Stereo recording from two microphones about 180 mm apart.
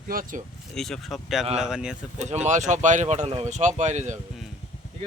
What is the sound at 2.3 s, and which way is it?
Speech, 40° right (ahead or behind).